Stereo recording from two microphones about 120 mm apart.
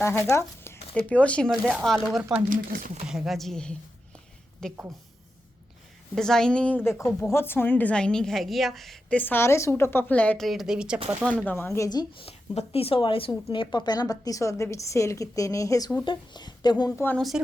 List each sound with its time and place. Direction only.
0.0 s speech: 20° left (ahead or behind)
0.9 s speech: 10° left (ahead or behind)
6.1 s speech: 5° left (ahead or behind)
6.8 s speech: 20° left (ahead or behind); by 9.1 s centre (ahead or behind)
9.1 s speech: 15° left (ahead or behind); by 11.0 s 5° right (ahead or behind)
11.3 s speech: 15° left (ahead or behind)
12.2 s speech: 55° left (ahead or behind); by 15.9 s 25° left (ahead or behind)
16.0 s speech: 40° left (ahead or behind)
17.2 s speech: centre (ahead or behind)